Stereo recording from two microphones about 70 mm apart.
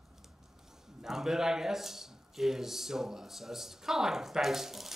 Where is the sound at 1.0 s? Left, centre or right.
Centre.